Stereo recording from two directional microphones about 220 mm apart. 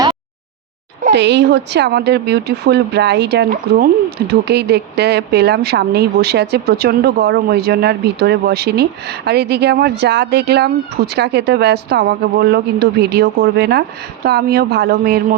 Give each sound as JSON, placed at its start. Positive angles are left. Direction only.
{"t": 1.1, "sound": "speech", "side_deg": -50}